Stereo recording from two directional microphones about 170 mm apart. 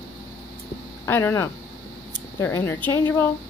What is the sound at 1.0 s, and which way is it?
Speech, 15° left (ahead or behind).